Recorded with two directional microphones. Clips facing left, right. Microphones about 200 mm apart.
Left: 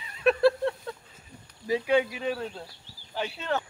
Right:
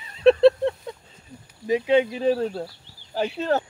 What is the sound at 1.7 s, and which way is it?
Speech, 20° right (ahead or behind).